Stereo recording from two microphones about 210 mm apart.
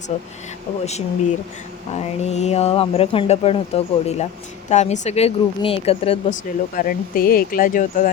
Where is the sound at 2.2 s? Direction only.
30° left (ahead or behind).